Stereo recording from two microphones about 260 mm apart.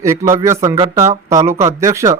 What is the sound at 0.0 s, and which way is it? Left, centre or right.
Speech, centre.